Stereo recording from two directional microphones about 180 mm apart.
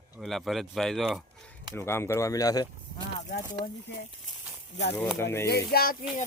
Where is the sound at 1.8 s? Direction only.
15° left (ahead or behind).